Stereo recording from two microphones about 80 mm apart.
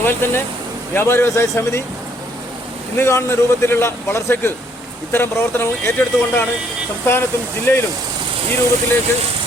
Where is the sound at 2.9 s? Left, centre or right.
Left.